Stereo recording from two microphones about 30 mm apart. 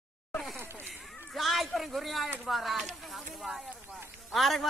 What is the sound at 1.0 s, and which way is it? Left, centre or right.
A man's voice, centre.